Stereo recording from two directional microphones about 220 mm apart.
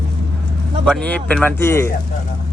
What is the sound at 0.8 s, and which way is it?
Speech, 5° left (ahead or behind).